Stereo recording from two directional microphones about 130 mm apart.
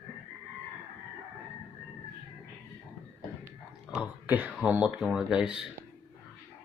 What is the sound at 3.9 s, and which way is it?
Speech, 10° right (ahead or behind).